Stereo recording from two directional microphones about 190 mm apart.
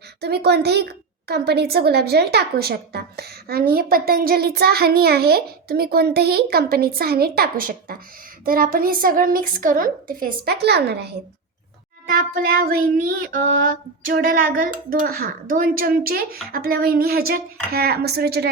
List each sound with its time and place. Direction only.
0.2 s speech: 60° right (ahead or behind)
8.4 s child singing: 50° right (ahead or behind)
12.0 s child singing: 50° right (ahead or behind)